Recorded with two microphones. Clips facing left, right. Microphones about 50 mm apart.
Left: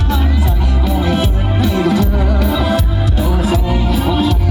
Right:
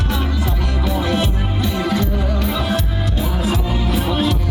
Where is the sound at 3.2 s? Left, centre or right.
Centre.